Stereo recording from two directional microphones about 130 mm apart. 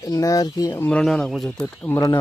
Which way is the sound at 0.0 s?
25° left (ahead or behind).